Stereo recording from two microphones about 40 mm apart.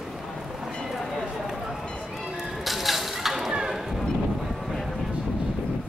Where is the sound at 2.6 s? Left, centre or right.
Centre.